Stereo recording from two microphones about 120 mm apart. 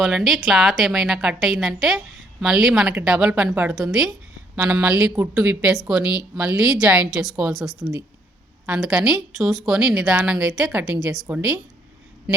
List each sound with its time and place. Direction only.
0.0 s a woman's voice: centre (ahead or behind); by 11.6 s 20° right (ahead or behind)